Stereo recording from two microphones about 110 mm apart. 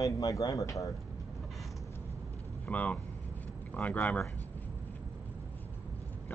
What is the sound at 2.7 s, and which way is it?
Speech, 15° left (ahead or behind).